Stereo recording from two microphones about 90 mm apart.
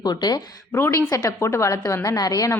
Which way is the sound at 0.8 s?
35° left (ahead or behind).